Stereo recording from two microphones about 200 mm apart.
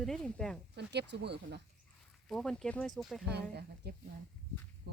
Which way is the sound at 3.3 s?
55° right (ahead or behind).